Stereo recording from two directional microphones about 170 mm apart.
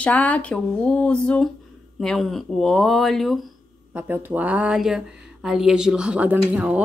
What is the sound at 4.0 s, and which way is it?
Speech, 10° right (ahead or behind).